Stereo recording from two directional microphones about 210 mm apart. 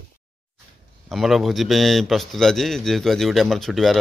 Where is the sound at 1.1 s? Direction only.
Centre (ahead or behind).